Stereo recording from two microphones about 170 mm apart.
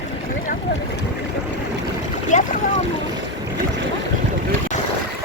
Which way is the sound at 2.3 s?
45° left (ahead or behind).